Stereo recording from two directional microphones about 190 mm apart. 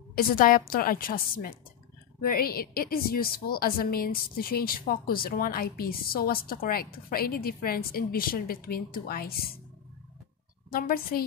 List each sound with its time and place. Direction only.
0.1 s a woman's voice: 50° left (ahead or behind)
10.7 s a woman's voice: 50° left (ahead or behind)